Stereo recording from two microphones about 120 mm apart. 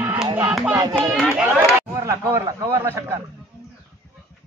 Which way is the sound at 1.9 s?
25° right (ahead or behind).